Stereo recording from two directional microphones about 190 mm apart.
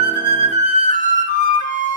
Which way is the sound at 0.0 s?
40° left (ahead or behind).